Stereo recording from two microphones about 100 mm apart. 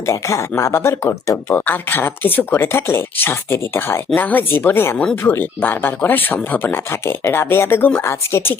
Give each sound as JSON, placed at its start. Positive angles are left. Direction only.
{"t": 0.0, "sound": "speech", "side_deg": 30}
{"t": 1.6, "sound": "speech", "side_deg": 20}